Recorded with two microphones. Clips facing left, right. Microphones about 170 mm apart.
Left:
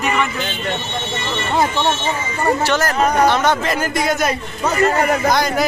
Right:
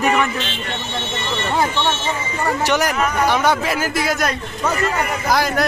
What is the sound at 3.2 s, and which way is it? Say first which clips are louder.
Speech: left 1 dB; 10° right (ahead or behind).